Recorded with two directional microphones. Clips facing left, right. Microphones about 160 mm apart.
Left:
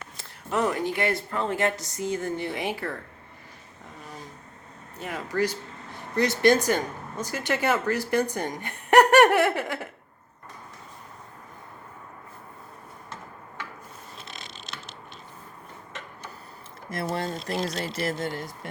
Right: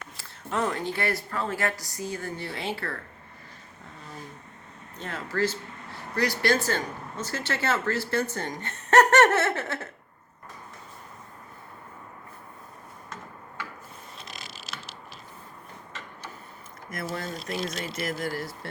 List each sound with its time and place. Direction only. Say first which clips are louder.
0.2 s speech: left 3 dB; 10° left (ahead or behind)
4.9 s speech: left 2 dB; 15° left (ahead or behind)
14.3 s mechanisms: even; 5° right (ahead or behind)
16.9 s speech: left 4 dB; 30° left (ahead or behind)